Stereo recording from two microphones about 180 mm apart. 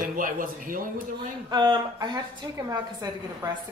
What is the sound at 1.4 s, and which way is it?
A woman's voice, 25° right (ahead or behind).